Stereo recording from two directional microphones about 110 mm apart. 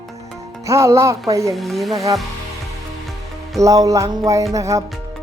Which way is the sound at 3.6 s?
30° right (ahead or behind).